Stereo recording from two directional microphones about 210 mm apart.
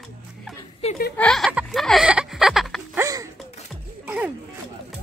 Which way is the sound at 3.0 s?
15° right (ahead or behind).